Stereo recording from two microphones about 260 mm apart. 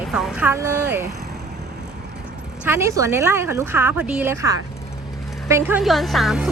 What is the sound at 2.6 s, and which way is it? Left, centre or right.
Speech, centre.